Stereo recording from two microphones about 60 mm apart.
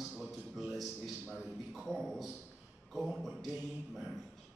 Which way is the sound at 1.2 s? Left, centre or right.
Right.